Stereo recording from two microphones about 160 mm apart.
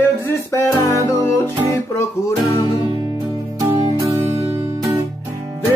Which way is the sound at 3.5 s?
25° right (ahead or behind).